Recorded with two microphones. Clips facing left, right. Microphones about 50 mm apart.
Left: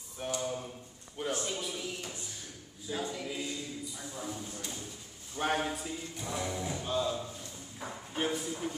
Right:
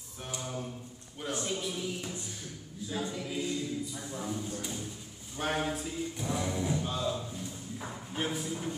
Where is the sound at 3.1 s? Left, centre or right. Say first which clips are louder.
Right 2 dB; centre.